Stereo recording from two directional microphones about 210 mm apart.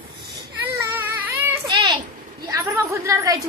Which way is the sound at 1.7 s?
20° right (ahead or behind).